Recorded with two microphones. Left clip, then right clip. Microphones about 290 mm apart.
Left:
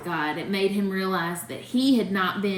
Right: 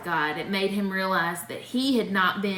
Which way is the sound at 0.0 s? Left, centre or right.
Centre.